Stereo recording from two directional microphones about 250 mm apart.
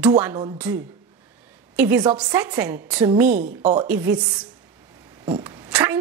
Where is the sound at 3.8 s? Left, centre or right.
Centre.